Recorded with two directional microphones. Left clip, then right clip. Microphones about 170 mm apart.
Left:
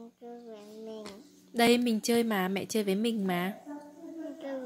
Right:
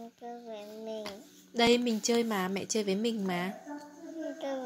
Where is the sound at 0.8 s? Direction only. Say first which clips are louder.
Right 4 dB; 30° right (ahead or behind).